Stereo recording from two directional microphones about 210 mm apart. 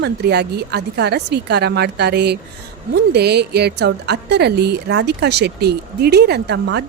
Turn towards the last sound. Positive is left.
turn(degrees=-55)  # may be behind; listen again after turning